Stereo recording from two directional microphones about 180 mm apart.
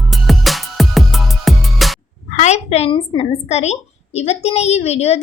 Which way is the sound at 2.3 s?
40° left (ahead or behind).